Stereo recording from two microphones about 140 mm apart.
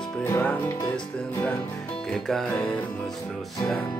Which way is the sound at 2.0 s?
5° left (ahead or behind).